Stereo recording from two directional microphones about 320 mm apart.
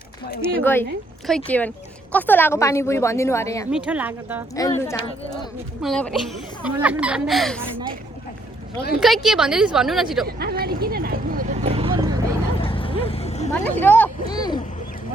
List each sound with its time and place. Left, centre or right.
0.6 s a woman's voice: centre
3.7 s speech: centre
4.5 s a woman's voice: centre
9.0 s speech: centre
10.2 s speech: right
12.6 s vehicle: centre
13.5 s a woman's voice: centre